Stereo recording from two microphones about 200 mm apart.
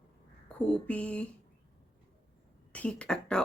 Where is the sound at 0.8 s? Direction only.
5° left (ahead or behind).